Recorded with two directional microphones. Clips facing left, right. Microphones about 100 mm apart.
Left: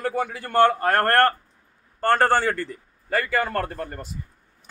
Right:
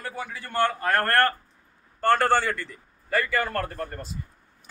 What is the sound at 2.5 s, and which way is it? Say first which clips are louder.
Speech: left 4 dB; 40° left (ahead or behind).